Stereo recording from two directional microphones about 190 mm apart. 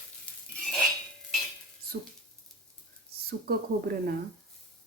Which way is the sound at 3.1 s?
55° right (ahead or behind).